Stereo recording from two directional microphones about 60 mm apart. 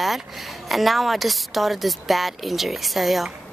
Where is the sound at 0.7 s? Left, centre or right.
Centre.